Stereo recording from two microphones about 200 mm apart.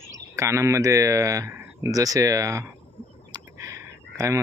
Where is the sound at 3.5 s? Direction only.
15° right (ahead or behind).